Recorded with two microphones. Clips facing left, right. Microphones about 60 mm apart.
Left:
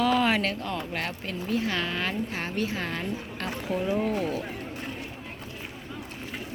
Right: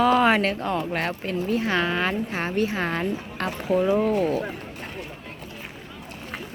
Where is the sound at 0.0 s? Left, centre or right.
Right.